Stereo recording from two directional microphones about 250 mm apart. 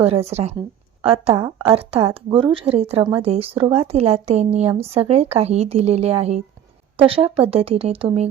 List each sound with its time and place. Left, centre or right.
0.0 s speech: right